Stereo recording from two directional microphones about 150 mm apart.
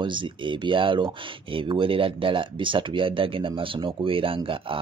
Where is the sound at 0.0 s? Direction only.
35° right (ahead or behind).